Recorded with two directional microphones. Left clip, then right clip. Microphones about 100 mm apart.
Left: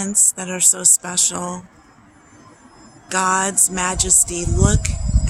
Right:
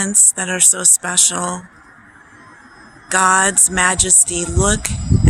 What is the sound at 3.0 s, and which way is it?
Music, 30° right (ahead or behind).